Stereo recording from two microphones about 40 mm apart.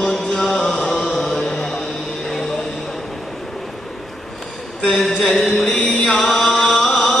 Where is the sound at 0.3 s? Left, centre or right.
Centre.